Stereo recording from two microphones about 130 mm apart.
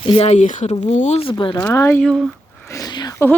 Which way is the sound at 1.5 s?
20° left (ahead or behind).